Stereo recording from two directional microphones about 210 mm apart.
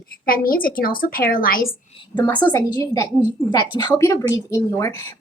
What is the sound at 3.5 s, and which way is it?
A woman's voice, 20° left (ahead or behind).